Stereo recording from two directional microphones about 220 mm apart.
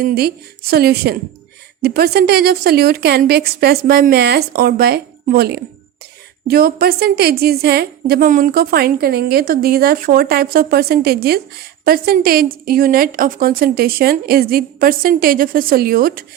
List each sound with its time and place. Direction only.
0.0 s a woman's voice: 45° right (ahead or behind)